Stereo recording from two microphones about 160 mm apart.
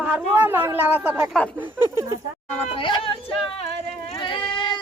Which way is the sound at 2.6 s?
35° left (ahead or behind).